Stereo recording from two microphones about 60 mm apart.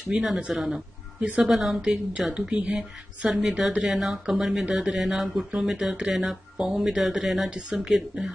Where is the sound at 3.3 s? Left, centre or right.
Centre.